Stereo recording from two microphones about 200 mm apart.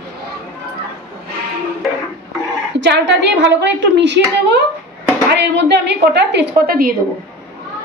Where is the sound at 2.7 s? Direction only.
60° right (ahead or behind).